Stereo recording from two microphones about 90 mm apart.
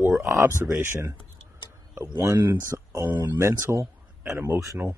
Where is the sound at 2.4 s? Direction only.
35° right (ahead or behind).